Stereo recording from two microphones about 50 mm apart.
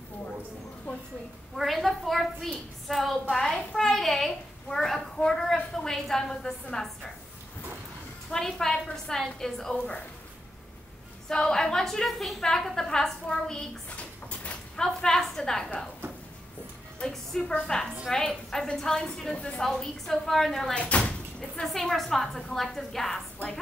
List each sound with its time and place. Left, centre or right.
1.6 s a woman's voice: centre
8.3 s a woman's voice: centre
11.2 s a woman's voice: centre
14.8 s a woman's voice: centre
17.1 s a woman's voice: centre
19.3 s speech: left
19.6 s a woman's voice: centre
20.7 s speech: left
21.6 s a woman's voice: centre